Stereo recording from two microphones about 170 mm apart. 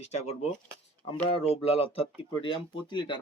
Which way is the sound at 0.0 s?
40° left (ahead or behind).